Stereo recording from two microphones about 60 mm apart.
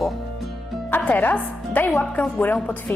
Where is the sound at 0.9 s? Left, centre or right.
Left.